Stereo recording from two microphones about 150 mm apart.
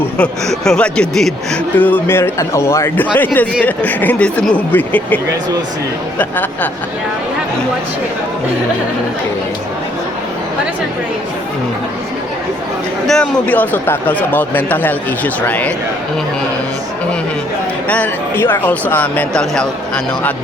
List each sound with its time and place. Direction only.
0.0 s speech: 5° left (ahead or behind)
13.1 s speech: 5° left (ahead or behind)
17.8 s speech: 10° left (ahead or behind)